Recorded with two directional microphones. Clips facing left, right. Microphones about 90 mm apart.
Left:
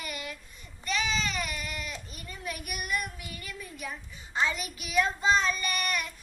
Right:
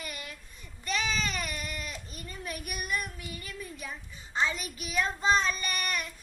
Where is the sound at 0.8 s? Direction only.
40° right (ahead or behind).